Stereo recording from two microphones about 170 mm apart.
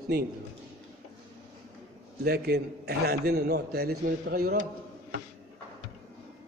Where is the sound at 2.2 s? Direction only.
65° right (ahead or behind).